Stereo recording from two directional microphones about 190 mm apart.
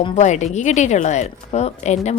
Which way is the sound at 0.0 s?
35° left (ahead or behind).